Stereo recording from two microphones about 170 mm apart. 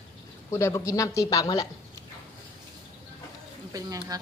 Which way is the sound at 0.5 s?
15° left (ahead or behind).